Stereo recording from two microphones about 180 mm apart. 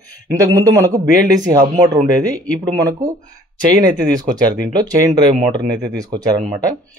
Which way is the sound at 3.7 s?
20° right (ahead or behind).